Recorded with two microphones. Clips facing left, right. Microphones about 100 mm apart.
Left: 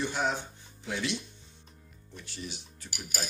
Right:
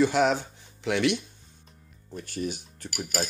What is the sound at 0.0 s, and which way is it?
Speech, 90° right.